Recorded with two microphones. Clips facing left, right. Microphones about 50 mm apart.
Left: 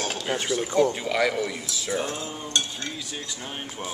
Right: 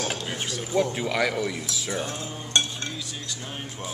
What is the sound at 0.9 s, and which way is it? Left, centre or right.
Speech, centre.